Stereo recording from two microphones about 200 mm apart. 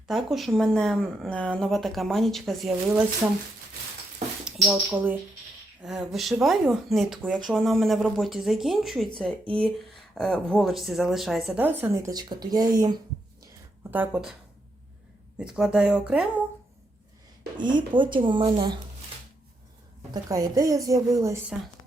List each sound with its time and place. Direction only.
0.1 s speech: centre (ahead or behind)
3.2 s a woman's voice: 10° right (ahead or behind)
4.4 s speech: 5° right (ahead or behind)
13.9 s a woman's voice: 10° right (ahead or behind)
15.4 s speech: 5° right (ahead or behind)
17.6 s speech: 25° right (ahead or behind)
20.2 s a woman's voice: 15° right (ahead or behind)